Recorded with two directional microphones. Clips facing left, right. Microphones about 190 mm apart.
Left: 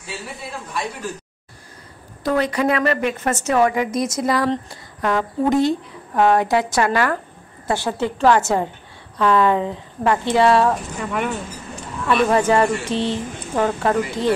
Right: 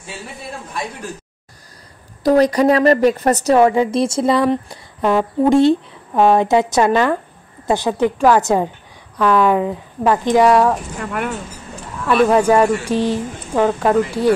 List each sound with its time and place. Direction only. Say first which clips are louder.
2.2 s a woman's voice: right 7 dB; 40° right (ahead or behind); by 10.7 s 15° right (ahead or behind)
10.7 s speech: right 1 dB; centre (ahead or behind)